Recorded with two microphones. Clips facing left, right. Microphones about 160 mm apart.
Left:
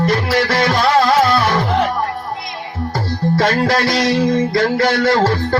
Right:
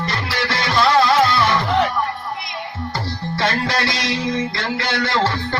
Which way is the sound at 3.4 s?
45° left (ahead or behind).